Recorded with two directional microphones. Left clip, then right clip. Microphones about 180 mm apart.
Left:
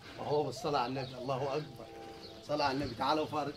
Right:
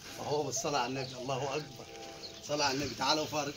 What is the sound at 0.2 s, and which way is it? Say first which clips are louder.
Speech: even; centre (ahead or behind).